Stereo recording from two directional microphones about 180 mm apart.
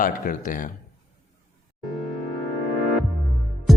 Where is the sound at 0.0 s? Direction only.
50° left (ahead or behind).